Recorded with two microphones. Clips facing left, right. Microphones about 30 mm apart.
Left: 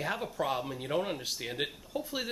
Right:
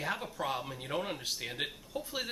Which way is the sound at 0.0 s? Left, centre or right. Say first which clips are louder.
Left 3 dB; centre.